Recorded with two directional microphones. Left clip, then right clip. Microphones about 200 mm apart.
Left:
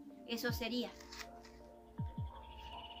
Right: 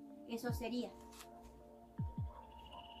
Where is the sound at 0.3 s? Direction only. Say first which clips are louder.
Left 3 dB; 5° right (ahead or behind).